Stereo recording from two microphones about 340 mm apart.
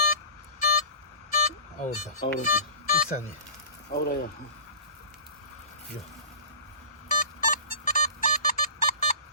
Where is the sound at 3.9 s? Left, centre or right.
Left.